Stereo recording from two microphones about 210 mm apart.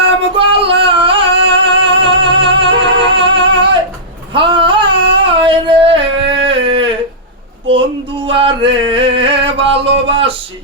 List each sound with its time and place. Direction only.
0.3 s female singing: 25° right (ahead or behind)
1.7 s music: 25° right (ahead or behind)
4.4 s a sound: 25° right (ahead or behind)
8.3 s male singing: 25° right (ahead or behind)